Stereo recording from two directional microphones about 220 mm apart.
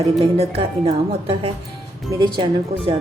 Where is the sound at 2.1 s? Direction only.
20° right (ahead or behind).